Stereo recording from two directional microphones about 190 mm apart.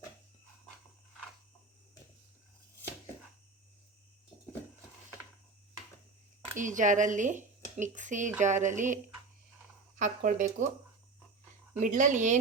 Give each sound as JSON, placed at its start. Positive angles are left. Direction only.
{"t": 6.6, "sound": "speech", "side_deg": -40}
{"t": 11.8, "sound": "speech", "side_deg": -40}